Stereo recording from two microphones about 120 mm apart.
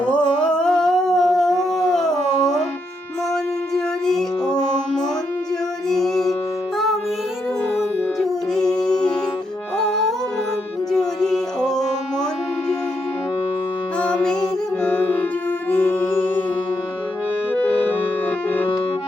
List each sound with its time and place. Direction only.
0.4 s dog: 5° left (ahead or behind)
4.0 s music: 5° left (ahead or behind)
5.9 s music: 5° left (ahead or behind)
8.2 s music: 5° left (ahead or behind)
14.0 s music: 10° left (ahead or behind)
17.5 s music: 10° left (ahead or behind)